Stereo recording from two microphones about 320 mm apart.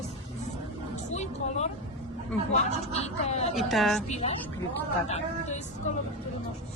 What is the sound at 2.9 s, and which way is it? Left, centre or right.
Speech, centre.